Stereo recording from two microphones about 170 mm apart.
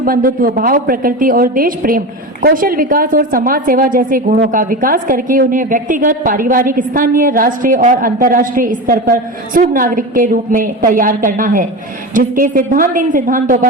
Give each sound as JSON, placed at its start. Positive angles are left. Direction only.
{"t": 0.0, "sound": "a woman's voice", "side_deg": -55}